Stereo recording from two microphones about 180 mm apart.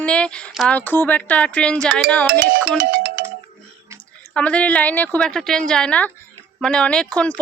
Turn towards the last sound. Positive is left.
turn(degrees=5)  # may be behind; listen again after turning